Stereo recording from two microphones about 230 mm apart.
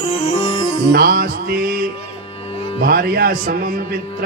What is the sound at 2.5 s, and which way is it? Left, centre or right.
Music, left.